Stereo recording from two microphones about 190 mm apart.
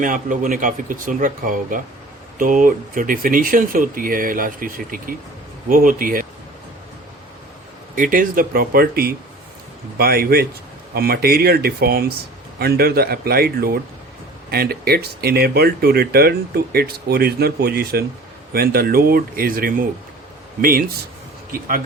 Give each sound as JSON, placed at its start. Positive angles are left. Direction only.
{"t": 0.0, "sound": "speech", "side_deg": -45}
{"t": 7.9, "sound": "speech", "side_deg": -45}